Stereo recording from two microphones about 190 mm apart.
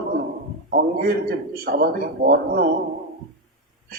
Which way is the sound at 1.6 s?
55° right (ahead or behind).